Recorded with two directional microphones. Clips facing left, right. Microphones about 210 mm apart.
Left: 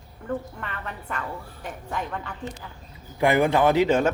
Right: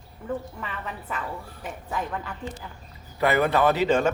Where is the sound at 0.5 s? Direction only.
5° right (ahead or behind).